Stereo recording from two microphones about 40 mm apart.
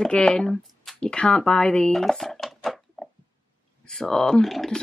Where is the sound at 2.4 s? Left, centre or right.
Centre.